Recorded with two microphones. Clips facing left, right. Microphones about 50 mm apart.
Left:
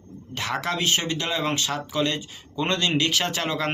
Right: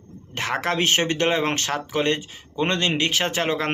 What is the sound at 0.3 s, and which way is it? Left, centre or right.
Speech, right.